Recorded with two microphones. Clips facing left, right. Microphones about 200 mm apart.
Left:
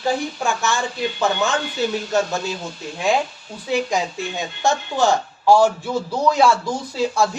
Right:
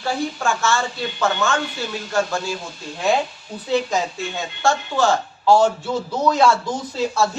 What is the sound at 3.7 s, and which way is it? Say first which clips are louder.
Speech: right 1 dB; 15° left (ahead or behind).